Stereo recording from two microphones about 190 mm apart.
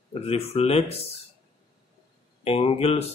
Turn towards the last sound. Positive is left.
turn(degrees=30)  # may be behind; listen again after turning